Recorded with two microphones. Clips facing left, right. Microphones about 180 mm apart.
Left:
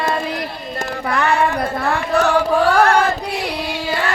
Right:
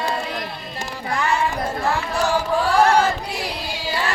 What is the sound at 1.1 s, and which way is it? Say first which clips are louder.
Music: left 4 dB; 60° left (ahead or behind).